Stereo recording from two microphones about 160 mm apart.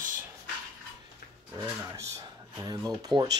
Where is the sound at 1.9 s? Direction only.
20° right (ahead or behind).